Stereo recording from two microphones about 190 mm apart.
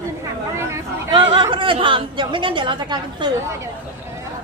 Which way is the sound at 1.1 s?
25° right (ahead or behind).